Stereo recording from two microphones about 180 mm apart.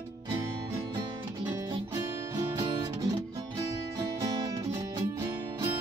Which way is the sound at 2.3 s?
20° right (ahead or behind).